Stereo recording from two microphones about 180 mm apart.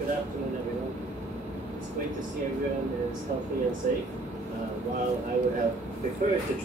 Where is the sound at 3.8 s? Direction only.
50° right (ahead or behind).